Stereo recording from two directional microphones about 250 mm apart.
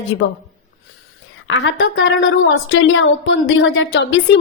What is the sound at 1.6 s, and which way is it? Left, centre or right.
A woman's voice, left.